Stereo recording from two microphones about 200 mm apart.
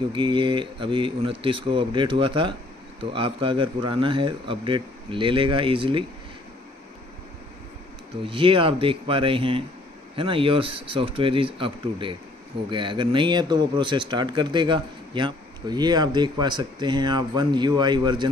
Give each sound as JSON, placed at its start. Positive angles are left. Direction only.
{"t": 0.1, "sound": "speech", "side_deg": -25}
{"t": 8.3, "sound": "speech", "side_deg": -25}